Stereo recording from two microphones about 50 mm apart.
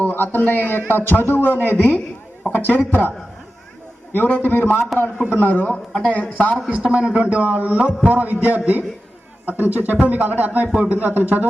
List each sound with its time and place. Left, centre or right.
0.0 s a man's voice: left
4.1 s a man's voice: left
6.7 s a man's voice: right